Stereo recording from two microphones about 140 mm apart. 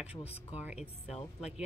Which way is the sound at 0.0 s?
50° left (ahead or behind).